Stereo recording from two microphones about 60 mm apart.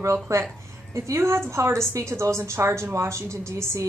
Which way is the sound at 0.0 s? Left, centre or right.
Right.